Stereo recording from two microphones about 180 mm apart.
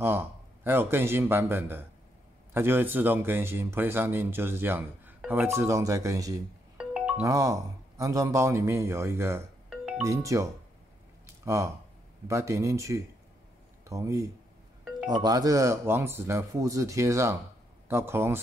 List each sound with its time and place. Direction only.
0.0 s speech: 10° right (ahead or behind)
6.8 s music: 5° right (ahead or behind)
7.2 s speech: 15° right (ahead or behind)
9.7 s music: 5° right (ahead or behind)
10.0 s speech: 15° right (ahead or behind)